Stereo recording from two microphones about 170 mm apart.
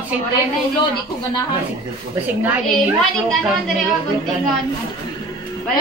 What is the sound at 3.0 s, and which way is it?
Speech, 5° left (ahead or behind).